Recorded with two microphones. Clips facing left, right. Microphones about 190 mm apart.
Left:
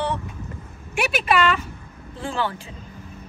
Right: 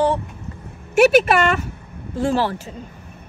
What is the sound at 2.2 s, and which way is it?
Speech, 40° right (ahead or behind).